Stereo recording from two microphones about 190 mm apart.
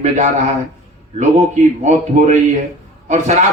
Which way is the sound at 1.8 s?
40° right (ahead or behind).